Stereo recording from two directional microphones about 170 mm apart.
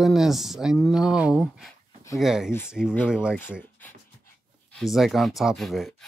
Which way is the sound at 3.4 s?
10° left (ahead or behind).